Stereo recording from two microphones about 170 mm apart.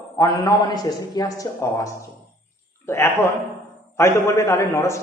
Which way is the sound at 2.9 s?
15° left (ahead or behind).